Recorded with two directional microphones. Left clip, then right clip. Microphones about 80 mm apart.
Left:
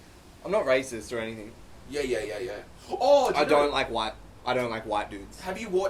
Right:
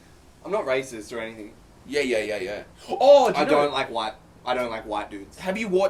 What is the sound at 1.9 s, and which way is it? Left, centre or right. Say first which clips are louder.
Speech: right 6 dB; right.